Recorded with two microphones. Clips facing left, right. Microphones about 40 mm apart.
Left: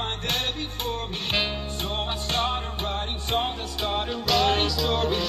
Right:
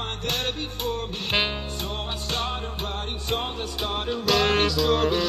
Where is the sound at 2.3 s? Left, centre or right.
Centre.